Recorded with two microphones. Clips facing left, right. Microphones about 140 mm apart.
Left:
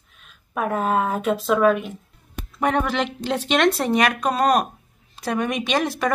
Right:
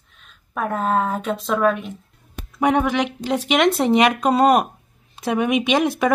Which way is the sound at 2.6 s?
15° right (ahead or behind).